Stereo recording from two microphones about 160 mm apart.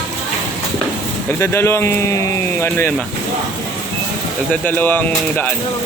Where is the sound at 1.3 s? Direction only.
15° left (ahead or behind).